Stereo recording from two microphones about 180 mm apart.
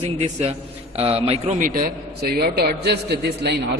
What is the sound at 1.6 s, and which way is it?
A man's voice, 55° right (ahead or behind).